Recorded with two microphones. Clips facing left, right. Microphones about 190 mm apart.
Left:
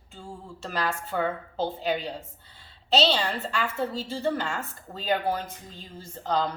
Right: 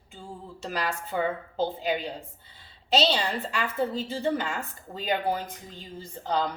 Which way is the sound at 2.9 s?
10° right (ahead or behind).